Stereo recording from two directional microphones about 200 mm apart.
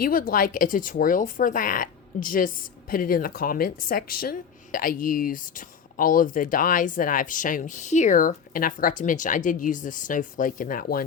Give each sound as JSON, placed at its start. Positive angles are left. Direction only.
{"t": 0.0, "sound": "speech", "side_deg": 45}